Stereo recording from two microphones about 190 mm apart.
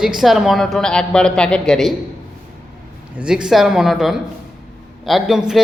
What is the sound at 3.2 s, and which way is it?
A man's voice, 5° right (ahead or behind).